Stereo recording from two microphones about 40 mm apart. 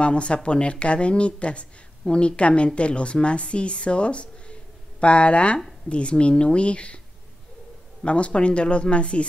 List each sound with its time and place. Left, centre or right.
0.0 s speech: left
8.0 s speech: left